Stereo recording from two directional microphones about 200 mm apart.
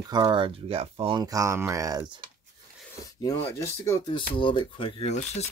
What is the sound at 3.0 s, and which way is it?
Filing, 15° left (ahead or behind).